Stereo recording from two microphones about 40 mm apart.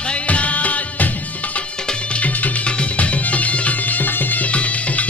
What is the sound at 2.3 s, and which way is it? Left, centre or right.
Music, left.